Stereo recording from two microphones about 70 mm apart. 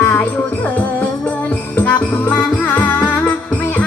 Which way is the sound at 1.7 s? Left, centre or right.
Left.